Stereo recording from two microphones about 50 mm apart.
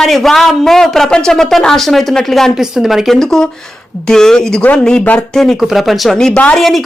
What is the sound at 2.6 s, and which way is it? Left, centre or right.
Speech, centre.